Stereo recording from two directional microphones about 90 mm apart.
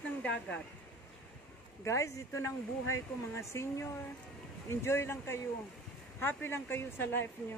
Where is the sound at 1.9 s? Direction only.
35° left (ahead or behind).